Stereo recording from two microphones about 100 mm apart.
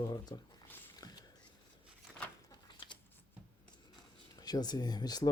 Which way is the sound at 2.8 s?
50° left (ahead or behind).